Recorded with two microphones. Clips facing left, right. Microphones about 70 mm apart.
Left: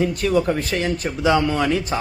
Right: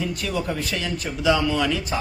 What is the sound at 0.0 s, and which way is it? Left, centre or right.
A man's voice, left.